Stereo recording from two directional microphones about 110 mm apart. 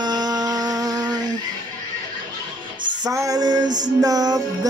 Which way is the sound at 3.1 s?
30° right (ahead or behind).